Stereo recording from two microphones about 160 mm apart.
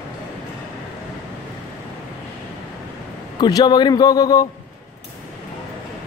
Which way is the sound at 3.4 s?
25° left (ahead or behind).